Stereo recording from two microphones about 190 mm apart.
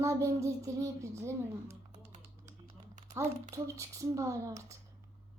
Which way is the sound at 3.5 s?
15° right (ahead or behind).